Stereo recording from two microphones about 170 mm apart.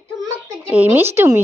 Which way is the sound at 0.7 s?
10° right (ahead or behind).